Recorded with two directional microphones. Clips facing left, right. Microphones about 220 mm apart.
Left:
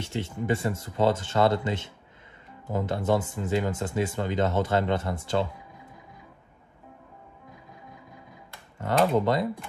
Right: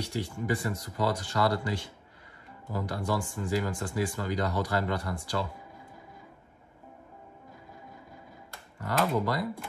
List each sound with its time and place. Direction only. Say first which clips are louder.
0.0 s speech: left 2 dB; 25° left (ahead or behind)
8.7 s speech: left 5 dB; 25° left (ahead or behind)